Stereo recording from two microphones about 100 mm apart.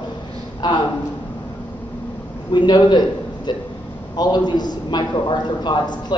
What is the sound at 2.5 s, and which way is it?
A man's voice, 50° left (ahead or behind).